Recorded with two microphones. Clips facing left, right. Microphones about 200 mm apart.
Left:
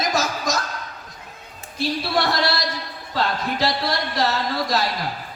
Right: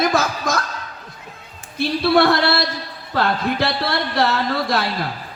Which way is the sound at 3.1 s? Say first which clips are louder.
Right 4 dB; 60° right (ahead or behind).